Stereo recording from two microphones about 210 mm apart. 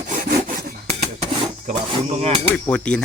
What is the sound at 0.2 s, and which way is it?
Rub, 45° right (ahead or behind).